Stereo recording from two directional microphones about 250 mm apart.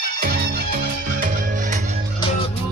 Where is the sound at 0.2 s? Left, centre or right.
Right.